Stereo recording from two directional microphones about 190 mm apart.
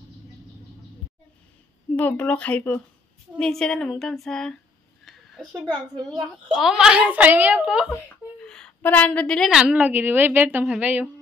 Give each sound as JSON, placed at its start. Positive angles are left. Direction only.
{"t": 2.0, "sound": "a woman's voice", "side_deg": 10}
{"t": 5.0, "sound": "a sound", "side_deg": 0}
{"t": 6.0, "sound": "a woman's voice", "side_deg": 0}
{"t": 7.9, "sound": "a woman's voice", "side_deg": 5}